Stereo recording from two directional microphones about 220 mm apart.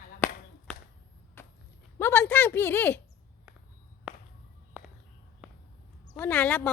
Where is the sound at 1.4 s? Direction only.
10° left (ahead or behind).